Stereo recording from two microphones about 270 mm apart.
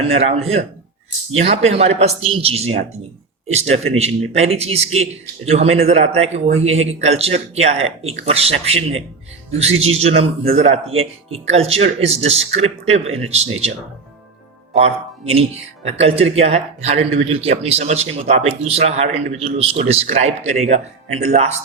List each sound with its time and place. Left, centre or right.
0.0 s a man's voice: right